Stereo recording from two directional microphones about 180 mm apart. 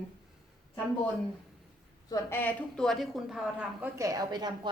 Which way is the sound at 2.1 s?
10° left (ahead or behind).